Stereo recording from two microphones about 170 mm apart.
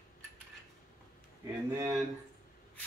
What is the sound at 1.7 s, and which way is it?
Speech, 15° right (ahead or behind).